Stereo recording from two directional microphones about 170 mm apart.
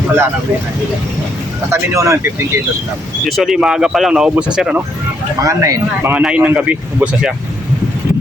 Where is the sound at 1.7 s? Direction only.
15° right (ahead or behind).